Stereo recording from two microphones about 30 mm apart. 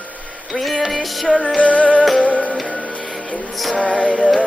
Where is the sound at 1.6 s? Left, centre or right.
Left.